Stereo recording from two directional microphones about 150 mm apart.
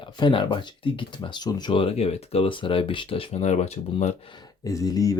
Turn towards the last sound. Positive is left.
turn(degrees=25)  # may be behind; listen again after turning